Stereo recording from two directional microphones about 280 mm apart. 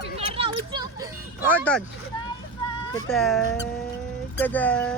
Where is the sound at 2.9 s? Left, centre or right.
Centre.